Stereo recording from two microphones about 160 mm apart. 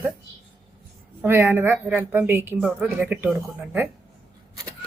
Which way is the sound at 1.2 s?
15° right (ahead or behind).